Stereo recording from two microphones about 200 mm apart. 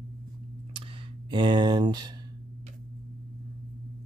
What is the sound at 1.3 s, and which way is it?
Speech, 25° right (ahead or behind).